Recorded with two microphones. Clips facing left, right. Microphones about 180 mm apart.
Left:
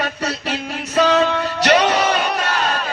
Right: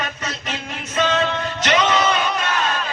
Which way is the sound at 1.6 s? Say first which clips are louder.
Left 4 dB; 35° left (ahead or behind).